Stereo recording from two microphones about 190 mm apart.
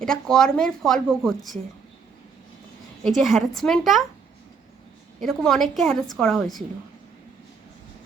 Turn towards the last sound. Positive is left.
turn(degrees=0)  # may be behind; listen again after turning